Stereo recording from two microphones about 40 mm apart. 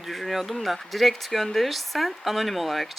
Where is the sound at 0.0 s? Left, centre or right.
Centre.